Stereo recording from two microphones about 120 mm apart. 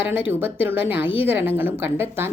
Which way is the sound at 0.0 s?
15° right (ahead or behind).